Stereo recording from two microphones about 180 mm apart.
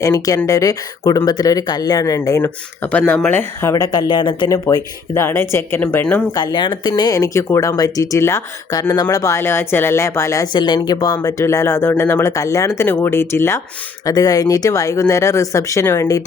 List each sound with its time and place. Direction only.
0.0 s speech: 15° left (ahead or behind)
6.3 s speech: 25° left (ahead or behind)